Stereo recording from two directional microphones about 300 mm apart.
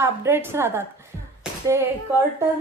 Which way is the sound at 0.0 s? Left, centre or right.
Centre.